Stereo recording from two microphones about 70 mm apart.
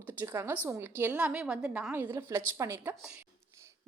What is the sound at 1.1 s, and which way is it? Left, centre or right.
Speech, centre.